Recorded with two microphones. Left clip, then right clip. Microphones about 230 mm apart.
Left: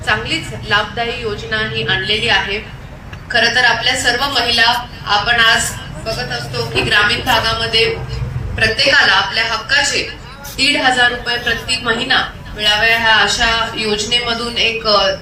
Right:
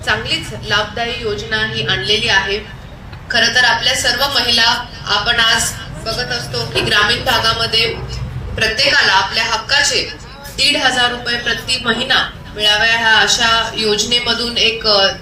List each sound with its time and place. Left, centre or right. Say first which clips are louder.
0.0 s a woman's voice: even; right